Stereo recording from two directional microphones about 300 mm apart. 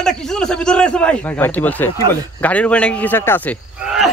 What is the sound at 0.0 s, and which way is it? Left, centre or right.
Speech, centre.